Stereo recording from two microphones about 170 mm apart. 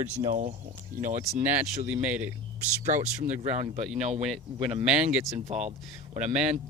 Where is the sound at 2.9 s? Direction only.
45° right (ahead or behind).